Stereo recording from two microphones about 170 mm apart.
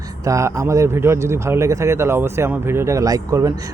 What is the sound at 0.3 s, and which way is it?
A man's voice, 20° right (ahead or behind).